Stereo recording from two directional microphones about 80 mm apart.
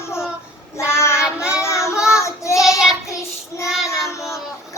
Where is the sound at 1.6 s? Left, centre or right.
Left.